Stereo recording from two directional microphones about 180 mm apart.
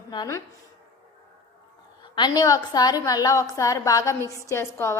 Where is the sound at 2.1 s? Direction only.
25° left (ahead or behind).